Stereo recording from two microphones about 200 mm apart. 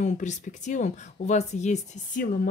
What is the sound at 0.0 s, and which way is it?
A woman's voice, 35° left (ahead or behind).